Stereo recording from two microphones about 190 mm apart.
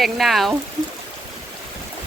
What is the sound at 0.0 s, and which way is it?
Speech, centre (ahead or behind).